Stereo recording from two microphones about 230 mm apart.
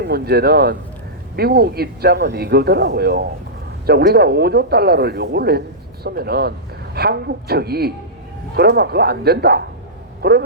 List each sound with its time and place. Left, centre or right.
0.1 s speech: right